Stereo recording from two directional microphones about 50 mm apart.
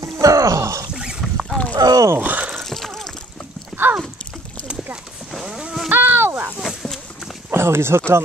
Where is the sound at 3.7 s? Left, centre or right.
Centre.